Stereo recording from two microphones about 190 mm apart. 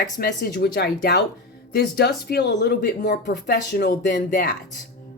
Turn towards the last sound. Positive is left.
turn(degrees=55)  # may be behind; listen again after turning